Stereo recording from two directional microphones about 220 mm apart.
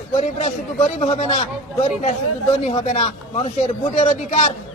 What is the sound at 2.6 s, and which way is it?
Speech, 25° left (ahead or behind).